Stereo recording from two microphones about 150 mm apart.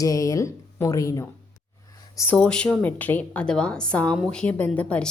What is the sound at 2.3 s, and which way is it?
A woman's voice, 5° left (ahead or behind).